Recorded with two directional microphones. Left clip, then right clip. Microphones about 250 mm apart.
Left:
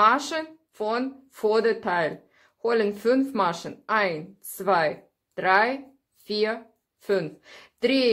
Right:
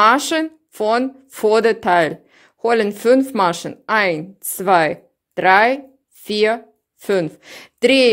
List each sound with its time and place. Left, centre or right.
0.0 s speech: right